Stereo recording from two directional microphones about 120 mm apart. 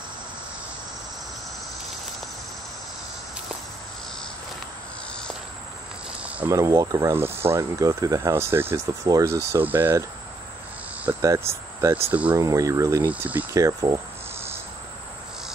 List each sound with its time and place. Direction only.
6.5 s speech: 25° right (ahead or behind)
11.1 s speech: 25° right (ahead or behind)
12.4 s speech: 30° right (ahead or behind)
13.0 s speech: 15° right (ahead or behind)
13.5 s speech: 25° right (ahead or behind)